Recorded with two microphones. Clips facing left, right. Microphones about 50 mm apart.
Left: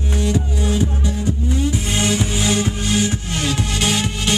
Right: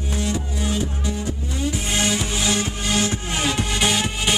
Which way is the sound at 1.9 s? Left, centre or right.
Centre.